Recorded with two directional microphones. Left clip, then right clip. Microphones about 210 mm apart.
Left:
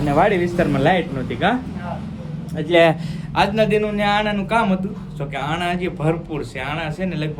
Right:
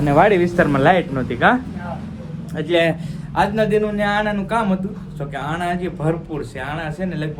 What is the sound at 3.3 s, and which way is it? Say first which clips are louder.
A man's voice: even; centre (ahead or behind).